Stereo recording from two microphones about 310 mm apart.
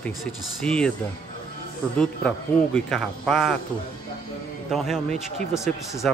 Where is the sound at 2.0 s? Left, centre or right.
Centre.